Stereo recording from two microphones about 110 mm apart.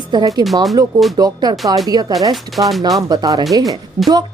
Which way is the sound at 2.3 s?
Centre (ahead or behind).